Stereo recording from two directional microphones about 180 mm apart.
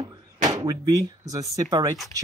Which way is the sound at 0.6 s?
20° right (ahead or behind).